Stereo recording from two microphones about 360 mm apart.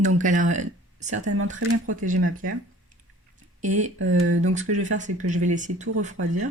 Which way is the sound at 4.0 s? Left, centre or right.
Right.